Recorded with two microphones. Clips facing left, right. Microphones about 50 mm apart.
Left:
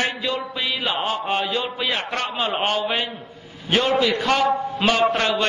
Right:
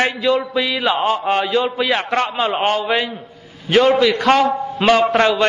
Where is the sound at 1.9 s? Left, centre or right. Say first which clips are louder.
Right 7 dB; right.